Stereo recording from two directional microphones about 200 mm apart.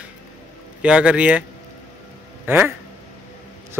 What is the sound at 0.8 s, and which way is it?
Speech, 5° right (ahead or behind).